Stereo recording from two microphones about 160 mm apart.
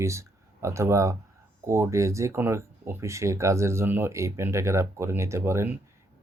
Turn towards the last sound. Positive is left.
turn(degrees=-15)  # may be behind; listen again after turning